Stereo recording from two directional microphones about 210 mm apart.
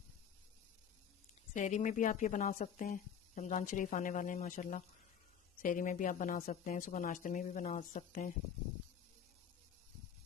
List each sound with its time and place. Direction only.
1.5 s a woman's voice: 35° left (ahead or behind)